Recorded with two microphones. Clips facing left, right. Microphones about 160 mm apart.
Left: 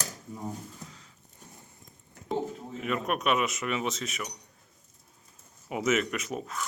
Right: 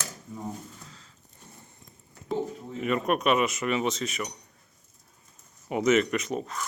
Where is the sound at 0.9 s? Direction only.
15° left (ahead or behind).